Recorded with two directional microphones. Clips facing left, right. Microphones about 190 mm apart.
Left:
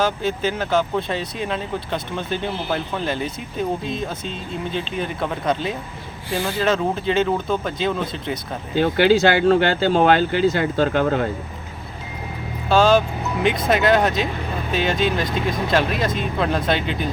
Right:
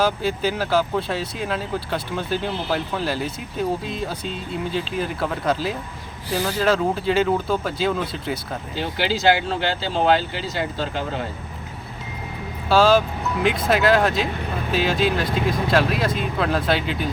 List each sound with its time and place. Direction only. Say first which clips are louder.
0.0 s speech: even; 10° right (ahead or behind)
4.7 s speech: even; 5° right (ahead or behind)
8.7 s speech: left 9 dB; 55° left (ahead or behind)
12.6 s speech: left 1 dB; 5° right (ahead or behind)